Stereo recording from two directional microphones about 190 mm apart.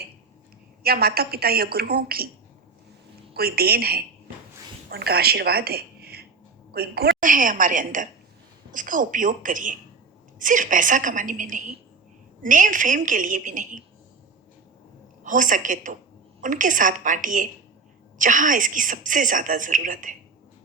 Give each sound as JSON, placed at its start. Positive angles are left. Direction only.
{"t": 0.8, "sound": "speech", "side_deg": -55}
{"t": 3.3, "sound": "a woman's voice", "side_deg": -55}
{"t": 15.2, "sound": "speech", "side_deg": -45}